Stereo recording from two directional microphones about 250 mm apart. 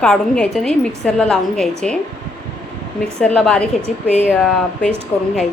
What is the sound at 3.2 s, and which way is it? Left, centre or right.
A woman's voice, centre.